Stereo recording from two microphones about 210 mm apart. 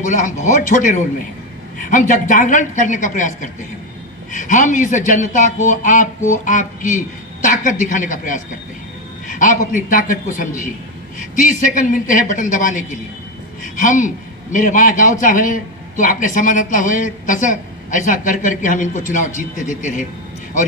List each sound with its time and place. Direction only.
0.0 s a man's voice: 35° left (ahead or behind)